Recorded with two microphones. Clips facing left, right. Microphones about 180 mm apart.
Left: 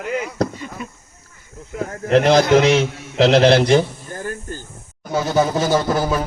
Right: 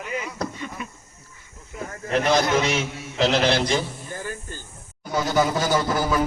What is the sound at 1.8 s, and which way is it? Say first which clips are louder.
A man's voice: left 8 dB; 85° left.